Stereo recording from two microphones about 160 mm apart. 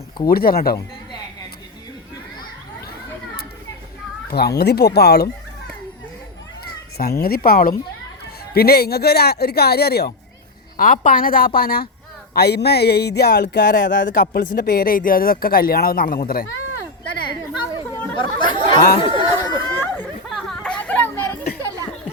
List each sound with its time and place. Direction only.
0.3 s speech: 70° left (ahead or behind)
4.3 s speech: 85° left
6.7 s speech: 75° left (ahead or behind)
8.5 s speech: 75° left (ahead or behind)
10.8 s a woman's voice: 55° left (ahead or behind)
12.3 s speech: 90° left; by 16.5 s 65° left (ahead or behind)
18.2 s chatter: 30° left (ahead or behind)
19.6 s chatter: 15° left (ahead or behind)
20.3 s a sound: 5° left (ahead or behind)